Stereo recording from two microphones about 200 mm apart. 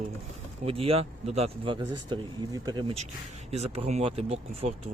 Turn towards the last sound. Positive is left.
turn(degrees=-30)  # may be behind; listen again after turning